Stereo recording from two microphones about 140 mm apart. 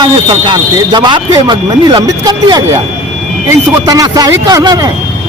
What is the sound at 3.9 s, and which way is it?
Speech, 25° right (ahead or behind).